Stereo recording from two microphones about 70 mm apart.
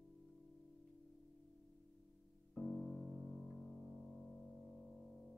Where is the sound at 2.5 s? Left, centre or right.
Centre.